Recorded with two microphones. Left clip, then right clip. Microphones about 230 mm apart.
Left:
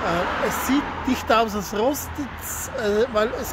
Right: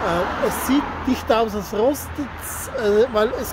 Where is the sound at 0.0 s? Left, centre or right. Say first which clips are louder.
Right 2 dB; centre.